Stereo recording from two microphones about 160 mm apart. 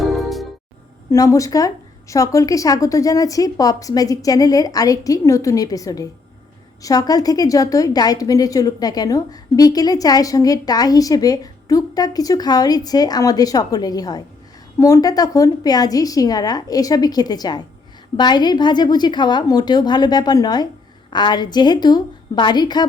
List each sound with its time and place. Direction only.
0.0 s music: centre (ahead or behind)
1.1 s a woman's voice: 20° left (ahead or behind)